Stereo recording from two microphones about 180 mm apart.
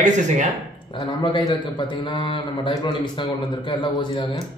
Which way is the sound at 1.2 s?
25° left (ahead or behind).